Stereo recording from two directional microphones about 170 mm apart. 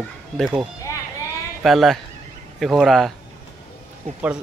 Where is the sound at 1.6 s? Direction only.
Centre (ahead or behind).